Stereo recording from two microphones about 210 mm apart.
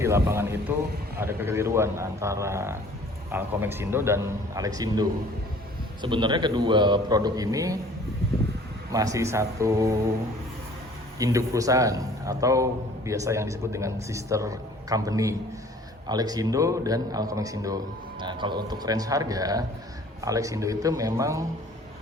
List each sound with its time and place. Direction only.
0.0 s a man's voice: 10° right (ahead or behind)
8.9 s a man's voice: 15° right (ahead or behind)
11.2 s a man's voice: 15° right (ahead or behind)